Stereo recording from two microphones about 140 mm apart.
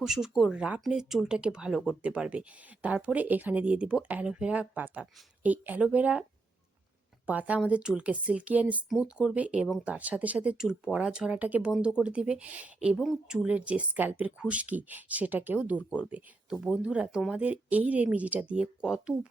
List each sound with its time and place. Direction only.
0.0 s speech: 5° right (ahead or behind)
7.3 s speech: 10° right (ahead or behind)